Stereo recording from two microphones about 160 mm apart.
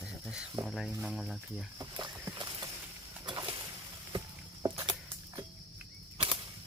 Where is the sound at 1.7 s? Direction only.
25° right (ahead or behind).